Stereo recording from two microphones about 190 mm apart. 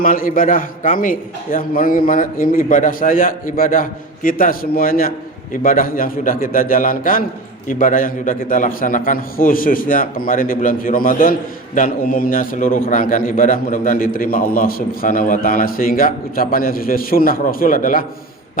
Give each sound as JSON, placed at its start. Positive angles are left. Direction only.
{"t": 0.0, "sound": "a man's voice", "side_deg": 45}